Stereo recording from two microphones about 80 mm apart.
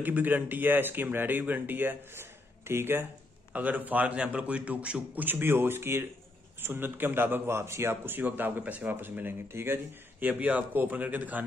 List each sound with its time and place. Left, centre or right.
0.0 s a man's voice: right